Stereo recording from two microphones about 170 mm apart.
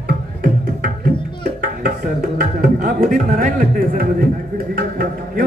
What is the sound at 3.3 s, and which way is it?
A man's voice, 60° right (ahead or behind).